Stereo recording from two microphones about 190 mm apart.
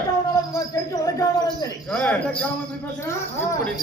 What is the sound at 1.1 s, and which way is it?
Speech, 20° left (ahead or behind).